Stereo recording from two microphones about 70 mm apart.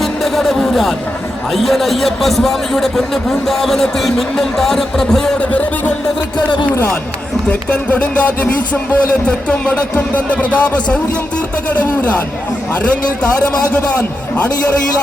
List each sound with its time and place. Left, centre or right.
0.0 s music: centre
1.5 s a man's voice: centre
5.5 s speech: left
7.7 s speech: left